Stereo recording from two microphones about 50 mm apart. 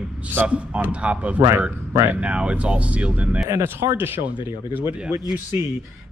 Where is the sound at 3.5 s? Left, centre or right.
Right.